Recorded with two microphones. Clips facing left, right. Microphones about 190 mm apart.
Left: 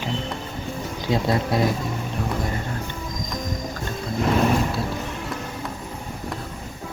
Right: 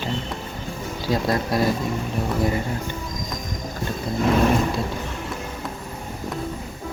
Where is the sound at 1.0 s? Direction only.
20° left (ahead or behind).